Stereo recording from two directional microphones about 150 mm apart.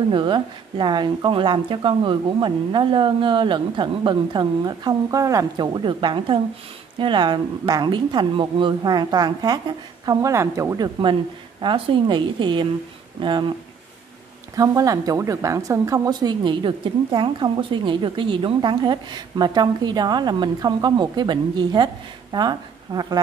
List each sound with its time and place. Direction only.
0.1 s a woman's voice: 30° right (ahead or behind)
11.6 s speech: 35° right (ahead or behind)
14.5 s a woman's voice: 25° right (ahead or behind)